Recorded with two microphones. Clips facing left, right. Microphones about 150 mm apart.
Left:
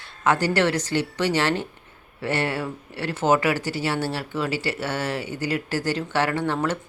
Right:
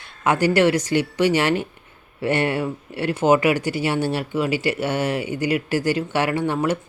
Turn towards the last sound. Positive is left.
turn(degrees=-10)  # may be behind; listen again after turning